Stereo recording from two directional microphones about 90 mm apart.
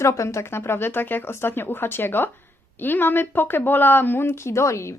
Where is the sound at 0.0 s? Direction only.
35° left (ahead or behind).